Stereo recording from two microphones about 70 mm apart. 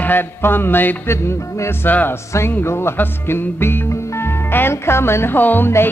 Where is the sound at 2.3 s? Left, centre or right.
Left.